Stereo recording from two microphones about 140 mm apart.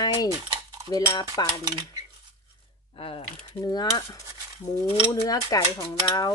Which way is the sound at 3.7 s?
25° left (ahead or behind).